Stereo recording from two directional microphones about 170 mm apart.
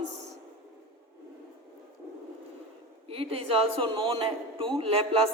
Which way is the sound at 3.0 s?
35° right (ahead or behind).